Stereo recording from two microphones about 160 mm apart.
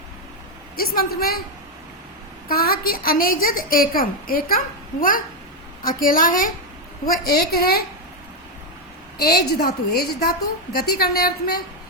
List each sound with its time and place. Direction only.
0.8 s a woman's voice: 70° left (ahead or behind)
2.5 s a woman's voice: 65° left (ahead or behind)
7.0 s a woman's voice: 75° left (ahead or behind)
9.2 s a woman's voice: 80° left